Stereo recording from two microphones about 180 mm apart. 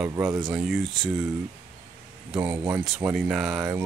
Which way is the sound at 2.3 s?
10° right (ahead or behind).